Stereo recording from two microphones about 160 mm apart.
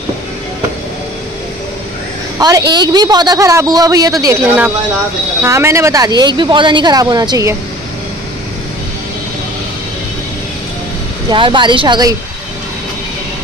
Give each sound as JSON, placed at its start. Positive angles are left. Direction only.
{"t": 2.3, "sound": "a woman's voice", "side_deg": -20}
{"t": 5.4, "sound": "speech", "side_deg": -15}
{"t": 11.2, "sound": "speech", "side_deg": -30}